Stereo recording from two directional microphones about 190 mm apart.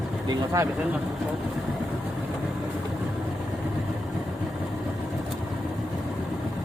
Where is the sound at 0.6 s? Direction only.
15° right (ahead or behind).